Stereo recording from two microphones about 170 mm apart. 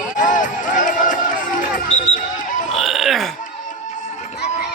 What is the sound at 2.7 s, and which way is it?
Burping, centre (ahead or behind).